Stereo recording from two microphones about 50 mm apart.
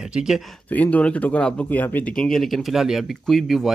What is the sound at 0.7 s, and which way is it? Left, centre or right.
Speech, left.